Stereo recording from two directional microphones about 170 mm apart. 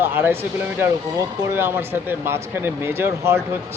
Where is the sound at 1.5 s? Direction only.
15° right (ahead or behind).